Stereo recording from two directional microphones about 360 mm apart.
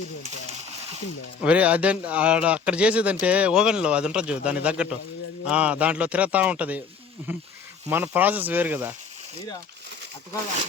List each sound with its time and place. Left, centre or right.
1.4 s speech: centre